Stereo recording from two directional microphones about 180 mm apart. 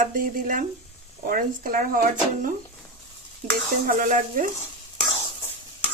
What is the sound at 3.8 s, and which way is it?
Speech, 45° right (ahead or behind).